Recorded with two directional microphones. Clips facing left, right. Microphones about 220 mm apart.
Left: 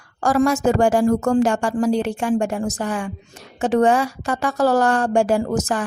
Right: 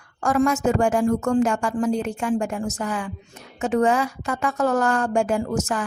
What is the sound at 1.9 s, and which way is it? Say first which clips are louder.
Speech: left 4 dB; 80° left.